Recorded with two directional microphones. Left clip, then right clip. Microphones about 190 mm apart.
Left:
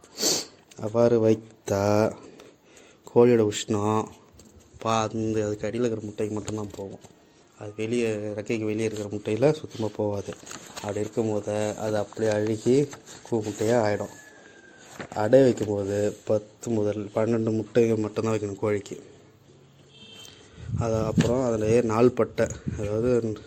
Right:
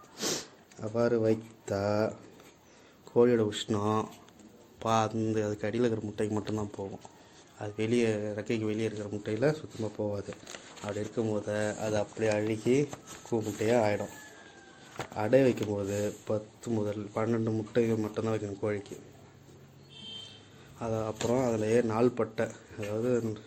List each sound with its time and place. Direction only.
0.2 s a sound: 35° left (ahead or behind)
3.1 s a man's voice: 40° left (ahead or behind); by 6.4 s 10° left (ahead or behind)
6.4 s speech: centre (ahead or behind)
8.3 s a man's voice: 25° left (ahead or behind)
8.8 s speech: 40° left (ahead or behind)
13.3 s a man's voice: 25° left (ahead or behind)
15.1 s a man's voice: 25° left (ahead or behind)
20.7 s speech: 35° left (ahead or behind)
21.3 s speech: 20° left (ahead or behind); by 23.4 s 40° left (ahead or behind)